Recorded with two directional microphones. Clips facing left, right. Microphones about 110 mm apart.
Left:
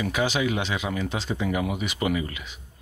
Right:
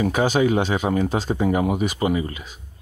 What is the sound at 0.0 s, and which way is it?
Speech, 45° right (ahead or behind).